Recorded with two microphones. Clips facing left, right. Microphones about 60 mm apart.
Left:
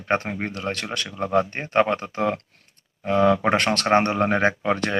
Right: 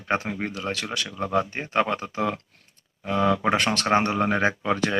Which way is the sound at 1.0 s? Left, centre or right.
Left.